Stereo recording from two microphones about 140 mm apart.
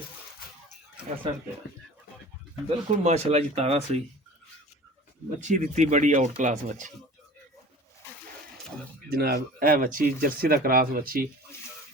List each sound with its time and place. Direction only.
2.6 s speech: 45° right (ahead or behind)
5.4 s speech: 60° right (ahead or behind)
9.0 s speech: 90° right